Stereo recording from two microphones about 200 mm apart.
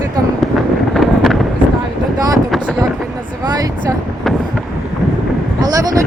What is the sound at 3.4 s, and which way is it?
Speech, 20° right (ahead or behind).